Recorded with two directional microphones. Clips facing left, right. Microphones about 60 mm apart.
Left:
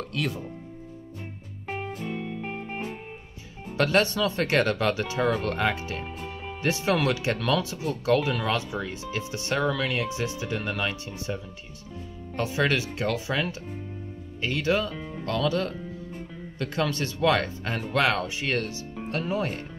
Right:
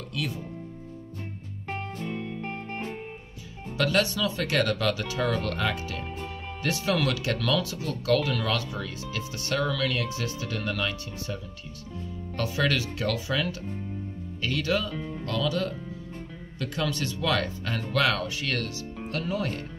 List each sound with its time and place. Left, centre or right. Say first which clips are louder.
1.7 s music: left 1 dB; centre
3.7 s speech: left 2 dB; left
6.0 s music: even; centre
6.6 s speech: left 2 dB; left
12.4 s speech: left 2 dB; left
14.9 s speech: right 1 dB; centre
15.2 s speech: left 3 dB; left